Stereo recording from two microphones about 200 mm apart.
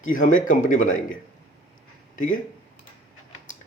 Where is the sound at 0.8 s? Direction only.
90° left.